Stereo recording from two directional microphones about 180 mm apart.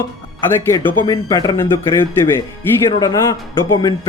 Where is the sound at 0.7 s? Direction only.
10° left (ahead or behind).